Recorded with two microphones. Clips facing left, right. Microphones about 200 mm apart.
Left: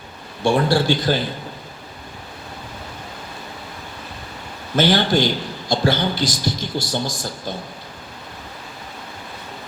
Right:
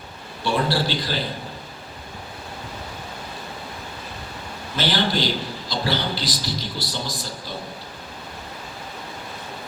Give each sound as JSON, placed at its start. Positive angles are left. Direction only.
{"t": 0.4, "sound": "a man's voice", "side_deg": 50}
{"t": 4.8, "sound": "a man's voice", "side_deg": 50}